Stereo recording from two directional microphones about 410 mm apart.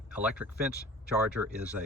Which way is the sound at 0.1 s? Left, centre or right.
Centre.